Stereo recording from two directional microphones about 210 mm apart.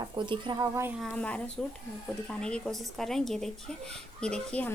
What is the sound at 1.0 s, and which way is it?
Speech, 5° left (ahead or behind).